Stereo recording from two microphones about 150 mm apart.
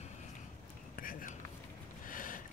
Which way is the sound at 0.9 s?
65° left (ahead or behind).